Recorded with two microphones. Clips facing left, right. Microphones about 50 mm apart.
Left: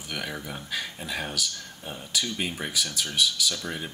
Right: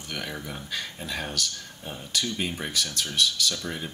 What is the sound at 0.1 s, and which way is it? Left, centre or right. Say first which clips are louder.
Speech: left 1 dB; centre.